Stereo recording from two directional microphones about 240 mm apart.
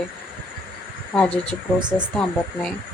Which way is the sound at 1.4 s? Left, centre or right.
Centre.